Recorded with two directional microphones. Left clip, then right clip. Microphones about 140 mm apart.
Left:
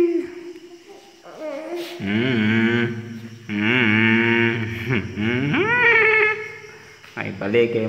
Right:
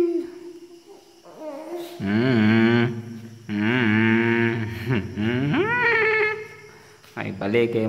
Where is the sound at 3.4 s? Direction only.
20° right (ahead or behind).